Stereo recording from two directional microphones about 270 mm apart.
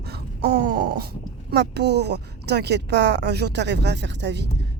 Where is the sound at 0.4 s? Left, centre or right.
Right.